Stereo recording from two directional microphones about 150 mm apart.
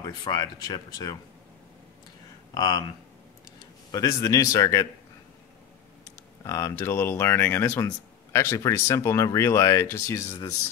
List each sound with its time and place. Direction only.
0.0 s speech: 25° left (ahead or behind)
2.5 s speech: 30° left (ahead or behind)
3.9 s speech: 25° left (ahead or behind)
6.4 s speech: 20° left (ahead or behind)